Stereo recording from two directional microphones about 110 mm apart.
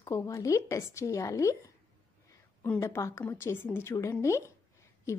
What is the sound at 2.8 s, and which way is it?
Speech, 25° left (ahead or behind).